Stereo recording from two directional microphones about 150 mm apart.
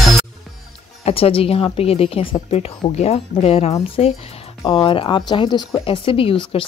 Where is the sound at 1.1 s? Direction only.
40° left (ahead or behind).